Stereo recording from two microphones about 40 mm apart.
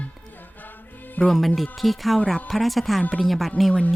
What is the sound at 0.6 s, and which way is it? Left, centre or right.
Music, left.